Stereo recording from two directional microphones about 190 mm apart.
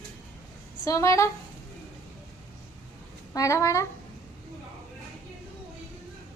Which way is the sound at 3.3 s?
15° left (ahead or behind).